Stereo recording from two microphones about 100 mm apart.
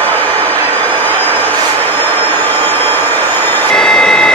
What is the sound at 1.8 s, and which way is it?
Train, 20° left (ahead or behind).